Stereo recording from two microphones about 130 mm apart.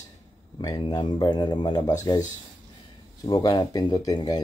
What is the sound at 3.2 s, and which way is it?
A man's voice, 30° left (ahead or behind).